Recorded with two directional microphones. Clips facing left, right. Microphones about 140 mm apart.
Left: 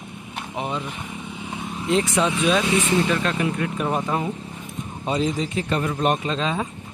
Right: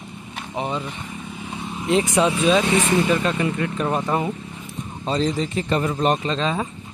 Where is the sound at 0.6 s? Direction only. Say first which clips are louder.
Right 2 dB; centre (ahead or behind).